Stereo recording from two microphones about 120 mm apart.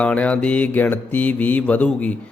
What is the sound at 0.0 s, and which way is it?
A man's voice, 10° left (ahead or behind).